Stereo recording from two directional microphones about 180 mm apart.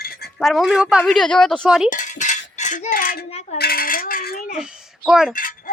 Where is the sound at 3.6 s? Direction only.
55° left (ahead or behind).